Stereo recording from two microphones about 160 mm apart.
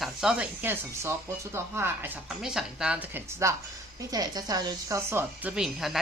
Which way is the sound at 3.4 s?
20° right (ahead or behind).